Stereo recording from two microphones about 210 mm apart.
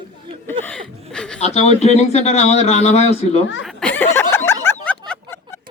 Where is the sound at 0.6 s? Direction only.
5° left (ahead or behind).